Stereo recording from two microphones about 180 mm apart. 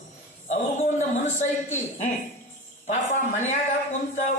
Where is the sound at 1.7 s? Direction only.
40° left (ahead or behind).